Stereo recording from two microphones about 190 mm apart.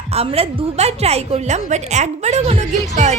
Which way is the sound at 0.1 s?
30° right (ahead or behind).